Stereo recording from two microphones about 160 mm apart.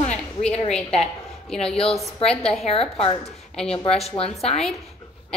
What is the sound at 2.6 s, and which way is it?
A woman's voice, 35° left (ahead or behind).